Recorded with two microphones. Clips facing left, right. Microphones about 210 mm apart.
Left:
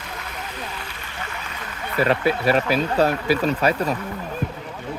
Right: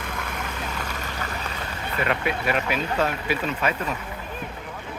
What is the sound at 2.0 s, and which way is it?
Speech, 35° left (ahead or behind).